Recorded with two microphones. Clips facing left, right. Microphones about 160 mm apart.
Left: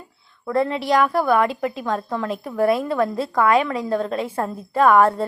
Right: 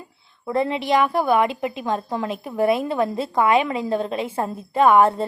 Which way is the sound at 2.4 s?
25° right (ahead or behind).